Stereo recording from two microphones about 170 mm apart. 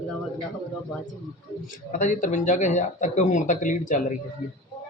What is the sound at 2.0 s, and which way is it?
A man's voice, 50° left (ahead or behind).